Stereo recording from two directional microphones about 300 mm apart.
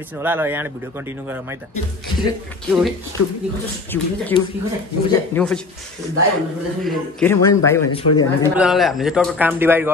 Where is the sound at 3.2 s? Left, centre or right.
Left.